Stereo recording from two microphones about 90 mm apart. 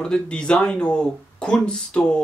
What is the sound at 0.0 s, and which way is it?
Speech, 10° left (ahead or behind).